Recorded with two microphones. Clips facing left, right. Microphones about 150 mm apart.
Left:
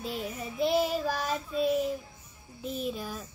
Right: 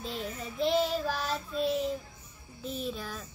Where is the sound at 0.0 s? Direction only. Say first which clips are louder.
Left 2 dB; 10° left (ahead or behind).